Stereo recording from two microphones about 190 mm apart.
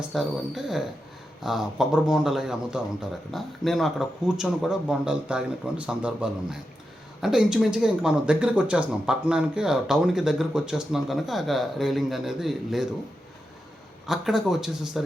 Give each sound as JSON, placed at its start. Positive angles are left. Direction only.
{"t": 0.1, "sound": "speech", "side_deg": 0}
{"t": 14.1, "sound": "speech", "side_deg": 0}